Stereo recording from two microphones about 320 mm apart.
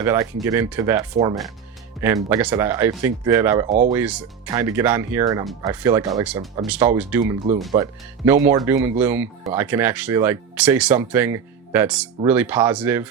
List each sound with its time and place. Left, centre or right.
0.0 s speech: centre
3.7 s speech: right
3.9 s speech: centre